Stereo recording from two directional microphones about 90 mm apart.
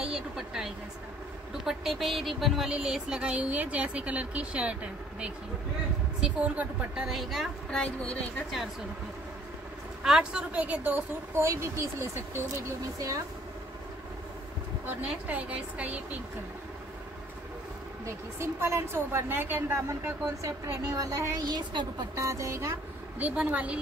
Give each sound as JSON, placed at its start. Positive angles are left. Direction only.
{"t": 0.0, "sound": "speech", "side_deg": -5}
{"t": 6.2, "sound": "speech", "side_deg": -15}
{"t": 7.1, "sound": "a woman's voice", "side_deg": 0}
{"t": 7.7, "sound": "speech", "side_deg": 10}
{"t": 10.0, "sound": "speech", "side_deg": -10}
{"t": 11.4, "sound": "speech", "side_deg": -30}
{"t": 14.9, "sound": "speech", "side_deg": -15}
{"t": 18.0, "sound": "a woman's voice", "side_deg": -30}
{"t": 19.9, "sound": "speech", "side_deg": -35}
{"t": 21.5, "sound": "speech", "side_deg": -50}
{"t": 22.1, "sound": "speech", "side_deg": -35}
{"t": 23.1, "sound": "speech", "side_deg": -15}